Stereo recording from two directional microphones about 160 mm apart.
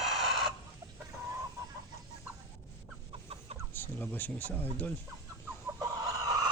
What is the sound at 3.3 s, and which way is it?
Chicken, 40° right (ahead or behind).